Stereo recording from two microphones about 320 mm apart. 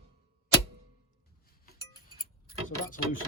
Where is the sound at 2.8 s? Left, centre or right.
Left.